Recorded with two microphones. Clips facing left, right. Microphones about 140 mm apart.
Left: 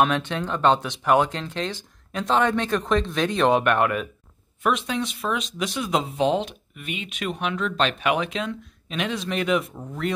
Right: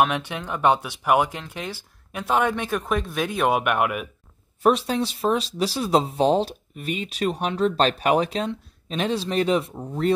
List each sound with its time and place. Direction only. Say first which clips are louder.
0.0 s speech: even; 10° right (ahead or behind)
4.6 s speech: right 4 dB; 35° right (ahead or behind)